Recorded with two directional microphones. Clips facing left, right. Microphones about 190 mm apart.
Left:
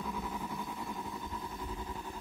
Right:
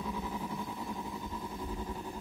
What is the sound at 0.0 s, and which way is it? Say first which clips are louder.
Vehicle: right 1 dB; 5° right (ahead or behind).